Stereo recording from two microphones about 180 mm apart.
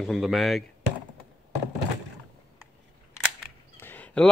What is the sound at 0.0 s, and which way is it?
Speech, centre (ahead or behind).